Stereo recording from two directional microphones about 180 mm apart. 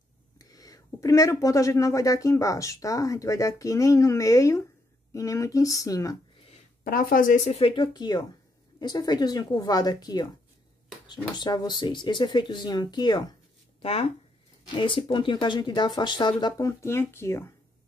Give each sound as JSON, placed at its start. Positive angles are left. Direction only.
{"t": 0.4, "sound": "speech", "side_deg": 20}
{"t": 6.8, "sound": "speech", "side_deg": 50}
{"t": 14.7, "sound": "speech", "side_deg": 25}